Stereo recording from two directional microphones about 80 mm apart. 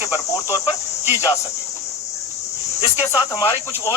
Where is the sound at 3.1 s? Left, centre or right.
Left.